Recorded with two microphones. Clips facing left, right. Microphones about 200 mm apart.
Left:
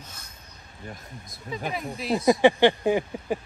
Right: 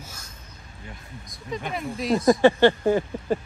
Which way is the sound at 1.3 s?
5° left (ahead or behind).